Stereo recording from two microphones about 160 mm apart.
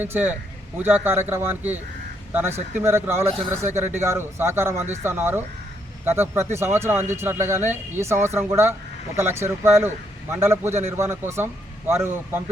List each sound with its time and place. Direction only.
0.0 s a man's voice: 10° right (ahead or behind)
7.6 s speech: 45° right (ahead or behind)
8.0 s a man's voice: 15° right (ahead or behind)